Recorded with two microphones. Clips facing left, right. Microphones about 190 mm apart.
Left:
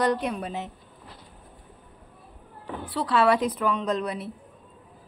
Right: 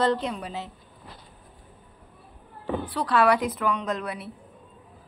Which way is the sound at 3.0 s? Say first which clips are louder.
Left 1 dB; 25° left (ahead or behind).